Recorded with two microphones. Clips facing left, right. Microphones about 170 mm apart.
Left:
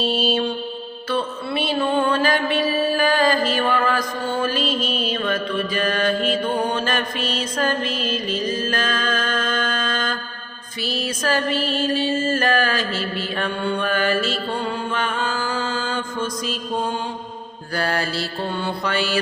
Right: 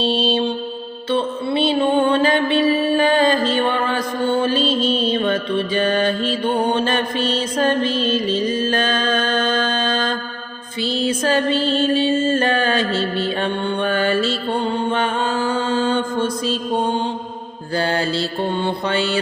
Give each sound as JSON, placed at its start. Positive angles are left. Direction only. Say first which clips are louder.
{"t": 0.0, "sound": "music", "louder": "right 2 dB", "side_deg": -30}
{"t": 7.9, "sound": "mantra", "louder": "right 6 dB", "side_deg": 0}
{"t": 8.1, "sound": "music", "louder": "right 5 dB", "side_deg": -30}
{"t": 11.9, "sound": "mantra", "louder": "right 4 dB", "side_deg": -25}
{"t": 12.9, "sound": "mantra", "louder": "right 5 dB", "side_deg": 0}
{"t": 13.4, "sound": "mantra", "louder": "right 3 dB", "side_deg": -30}
{"t": 14.5, "sound": "music", "louder": "right 5 dB", "side_deg": -30}
{"t": 15.6, "sound": "mantra", "louder": "right 7 dB", "side_deg": -35}